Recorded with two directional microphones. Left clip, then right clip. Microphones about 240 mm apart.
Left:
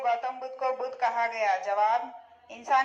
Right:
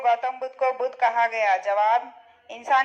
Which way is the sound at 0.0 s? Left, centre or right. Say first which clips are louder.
Right 6 dB; right.